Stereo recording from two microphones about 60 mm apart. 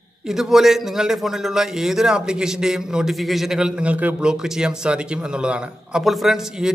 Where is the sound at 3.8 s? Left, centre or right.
Right.